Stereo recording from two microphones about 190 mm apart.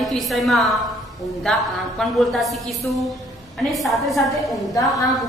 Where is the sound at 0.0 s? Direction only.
Centre (ahead or behind).